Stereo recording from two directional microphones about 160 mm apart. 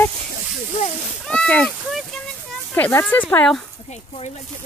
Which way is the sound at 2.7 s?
15° left (ahead or behind).